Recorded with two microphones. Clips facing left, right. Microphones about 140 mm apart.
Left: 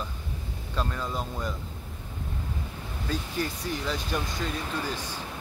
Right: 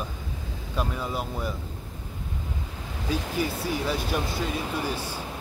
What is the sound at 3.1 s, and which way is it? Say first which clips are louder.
Speech: right 3 dB; 10° right (ahead or behind).